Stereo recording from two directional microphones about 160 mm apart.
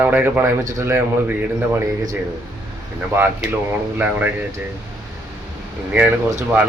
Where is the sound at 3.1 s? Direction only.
15° right (ahead or behind).